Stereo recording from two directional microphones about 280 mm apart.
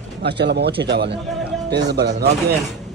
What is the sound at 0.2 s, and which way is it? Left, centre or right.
Speech, right.